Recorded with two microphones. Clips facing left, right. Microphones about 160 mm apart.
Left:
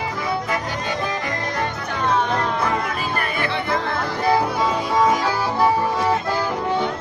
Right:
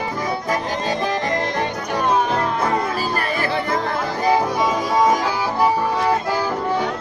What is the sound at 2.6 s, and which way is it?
Music, 35° right (ahead or behind).